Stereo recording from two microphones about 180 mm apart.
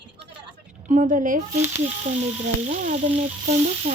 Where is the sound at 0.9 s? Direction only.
45° right (ahead or behind).